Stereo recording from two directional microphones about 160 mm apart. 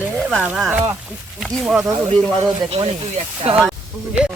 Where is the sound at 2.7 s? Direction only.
35° right (ahead or behind).